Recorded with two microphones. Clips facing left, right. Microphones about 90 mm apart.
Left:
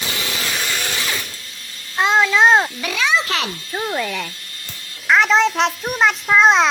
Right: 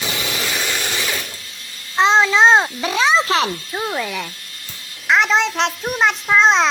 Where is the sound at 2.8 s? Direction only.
30° right (ahead or behind).